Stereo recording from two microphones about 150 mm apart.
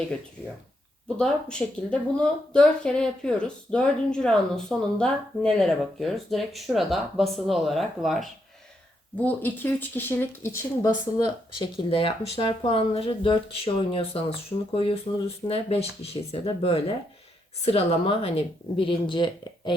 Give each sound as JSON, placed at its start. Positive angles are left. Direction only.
{"t": 1.1, "sound": "speech", "side_deg": 5}
{"t": 9.1, "sound": "speech", "side_deg": 10}
{"t": 11.6, "sound": "speech", "side_deg": 35}